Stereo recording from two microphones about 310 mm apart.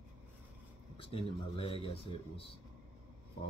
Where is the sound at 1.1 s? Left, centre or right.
Centre.